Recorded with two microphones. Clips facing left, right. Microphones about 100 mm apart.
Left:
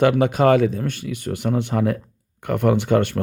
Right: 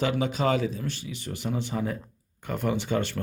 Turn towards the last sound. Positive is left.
turn(degrees=60)  # may be behind; listen again after turning